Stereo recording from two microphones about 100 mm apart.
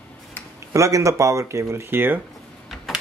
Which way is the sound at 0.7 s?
30° right (ahead or behind).